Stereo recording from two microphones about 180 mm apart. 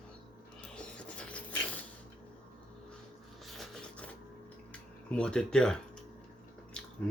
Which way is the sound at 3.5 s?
5° left (ahead or behind).